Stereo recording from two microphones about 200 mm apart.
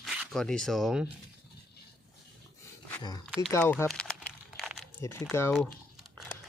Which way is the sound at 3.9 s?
5° left (ahead or behind).